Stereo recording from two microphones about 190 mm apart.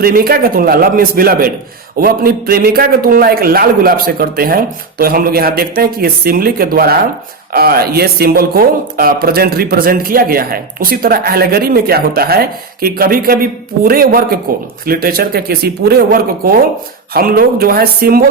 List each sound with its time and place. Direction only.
0.0 s speech: 50° right (ahead or behind)